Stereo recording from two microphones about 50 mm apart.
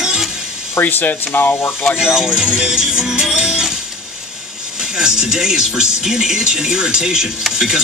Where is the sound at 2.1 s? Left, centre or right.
Centre.